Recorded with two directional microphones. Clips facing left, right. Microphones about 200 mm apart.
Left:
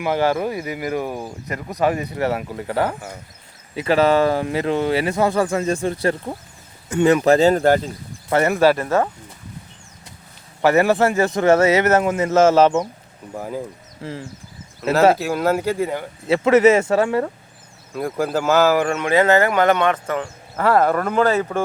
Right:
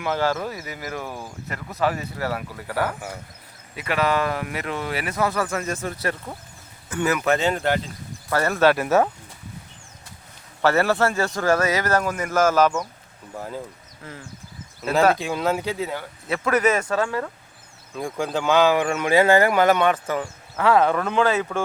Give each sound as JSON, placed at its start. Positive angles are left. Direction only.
{"t": 0.0, "sound": "speech", "side_deg": 15}
{"t": 8.3, "sound": "speech", "side_deg": 20}
{"t": 8.8, "sound": "speech", "side_deg": -5}
{"t": 10.6, "sound": "speech", "side_deg": 15}
{"t": 13.3, "sound": "speech", "side_deg": 10}
{"t": 14.0, "sound": "speech", "side_deg": 30}
{"t": 15.2, "sound": "speech", "side_deg": 5}
{"t": 16.2, "sound": "speech", "side_deg": 25}
{"t": 17.9, "sound": "speech", "side_deg": 5}
{"t": 20.6, "sound": "speech", "side_deg": 10}